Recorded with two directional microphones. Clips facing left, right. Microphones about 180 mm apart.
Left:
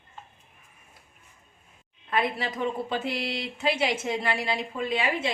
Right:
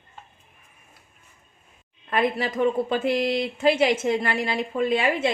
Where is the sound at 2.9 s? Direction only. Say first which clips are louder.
Right 7 dB; 50° right (ahead or behind).